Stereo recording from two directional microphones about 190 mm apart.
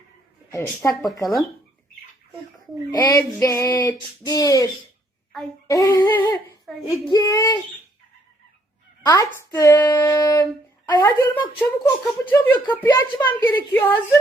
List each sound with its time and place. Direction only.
0.5 s speech: 15° left (ahead or behind)
2.9 s speech: 20° left (ahead or behind)
9.0 s speech: 15° left (ahead or behind)